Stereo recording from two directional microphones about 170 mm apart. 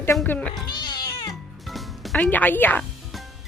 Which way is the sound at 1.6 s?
Centre (ahead or behind).